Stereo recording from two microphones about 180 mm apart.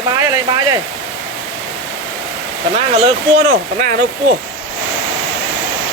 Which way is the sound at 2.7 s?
35° right (ahead or behind).